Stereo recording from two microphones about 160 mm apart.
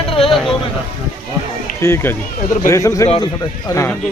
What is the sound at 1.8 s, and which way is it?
Speech, 15° left (ahead or behind).